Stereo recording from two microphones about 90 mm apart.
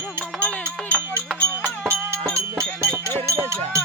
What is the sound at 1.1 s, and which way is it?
Music, 25° right (ahead or behind).